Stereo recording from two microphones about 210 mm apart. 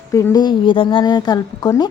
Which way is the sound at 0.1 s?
15° left (ahead or behind).